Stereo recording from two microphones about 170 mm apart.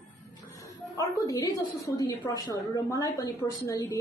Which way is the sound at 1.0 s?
20° left (ahead or behind).